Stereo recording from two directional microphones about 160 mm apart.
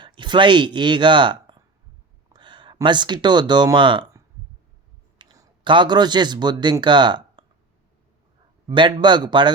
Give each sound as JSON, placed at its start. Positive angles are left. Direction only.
{"t": 0.0, "sound": "speech", "side_deg": -30}
{"t": 5.1, "sound": "speech", "side_deg": -25}
{"t": 8.6, "sound": "speech", "side_deg": -30}